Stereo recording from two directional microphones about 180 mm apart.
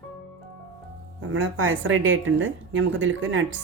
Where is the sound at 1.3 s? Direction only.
90° right.